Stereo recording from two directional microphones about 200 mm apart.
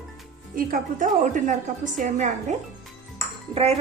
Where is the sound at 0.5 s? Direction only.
45° right (ahead or behind).